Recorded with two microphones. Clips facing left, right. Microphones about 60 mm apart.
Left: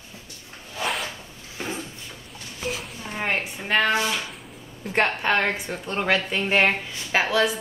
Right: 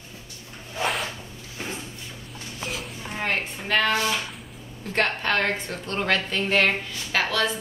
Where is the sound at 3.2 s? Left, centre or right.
Centre.